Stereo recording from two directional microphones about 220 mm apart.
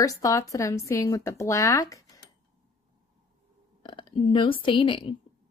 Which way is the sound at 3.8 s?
20° left (ahead or behind).